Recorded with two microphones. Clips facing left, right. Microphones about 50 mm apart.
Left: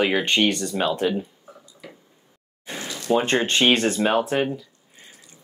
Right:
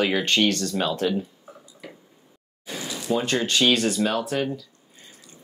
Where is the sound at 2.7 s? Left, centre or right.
Left.